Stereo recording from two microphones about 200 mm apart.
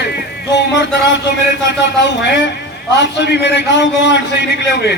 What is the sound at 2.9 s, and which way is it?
Speech, 60° left (ahead or behind).